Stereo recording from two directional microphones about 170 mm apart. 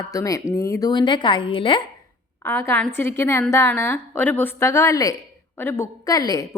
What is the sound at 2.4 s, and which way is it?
A woman's voice, 15° left (ahead or behind).